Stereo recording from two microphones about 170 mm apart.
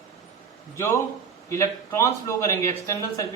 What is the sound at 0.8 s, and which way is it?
A man's voice, 15° left (ahead or behind).